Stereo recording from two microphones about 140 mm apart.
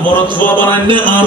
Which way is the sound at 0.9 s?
35° right (ahead or behind).